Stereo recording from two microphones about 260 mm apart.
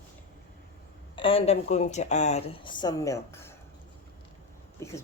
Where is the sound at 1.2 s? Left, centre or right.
Left.